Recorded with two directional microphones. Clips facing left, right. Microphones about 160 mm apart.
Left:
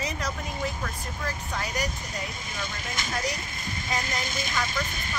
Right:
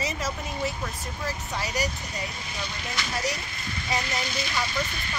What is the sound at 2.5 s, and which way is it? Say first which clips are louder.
Speech: even; 45° left (ahead or behind).